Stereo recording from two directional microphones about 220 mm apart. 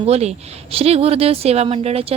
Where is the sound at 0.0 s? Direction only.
30° right (ahead or behind).